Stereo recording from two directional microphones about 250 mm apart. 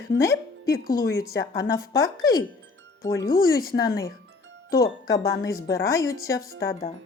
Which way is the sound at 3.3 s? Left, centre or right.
Left.